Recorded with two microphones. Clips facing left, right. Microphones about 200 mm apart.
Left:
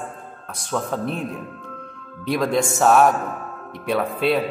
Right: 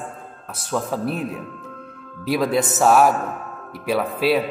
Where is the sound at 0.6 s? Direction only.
5° right (ahead or behind).